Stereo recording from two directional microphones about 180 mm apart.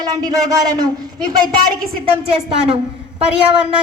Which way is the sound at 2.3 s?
30° right (ahead or behind).